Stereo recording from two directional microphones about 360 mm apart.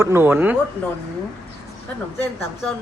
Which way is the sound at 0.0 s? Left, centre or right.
Centre.